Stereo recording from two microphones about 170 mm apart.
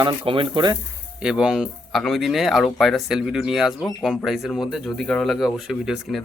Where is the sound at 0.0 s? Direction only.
30° right (ahead or behind).